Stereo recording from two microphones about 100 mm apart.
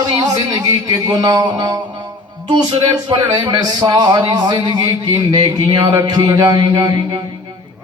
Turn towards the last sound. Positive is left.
turn(degrees=-40)  # may be behind; listen again after turning